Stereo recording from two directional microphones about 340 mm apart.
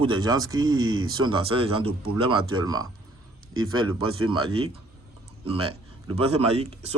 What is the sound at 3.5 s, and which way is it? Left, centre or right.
Speech, right.